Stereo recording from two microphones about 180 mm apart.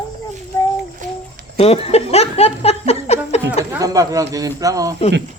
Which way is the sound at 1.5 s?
35° left (ahead or behind).